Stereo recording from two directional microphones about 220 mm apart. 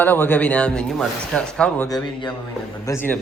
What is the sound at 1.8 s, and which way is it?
A man's voice, 20° left (ahead or behind).